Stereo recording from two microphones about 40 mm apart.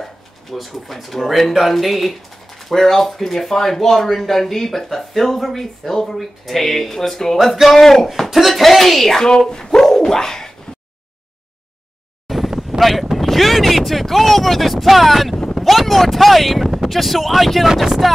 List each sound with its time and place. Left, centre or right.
0.0 s speech: centre
9.8 s a sound: centre
12.3 s wind noise: centre
15.6 s speech: centre